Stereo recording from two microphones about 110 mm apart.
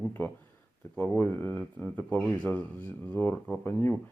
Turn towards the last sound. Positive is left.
turn(degrees=20)  # may be behind; listen again after turning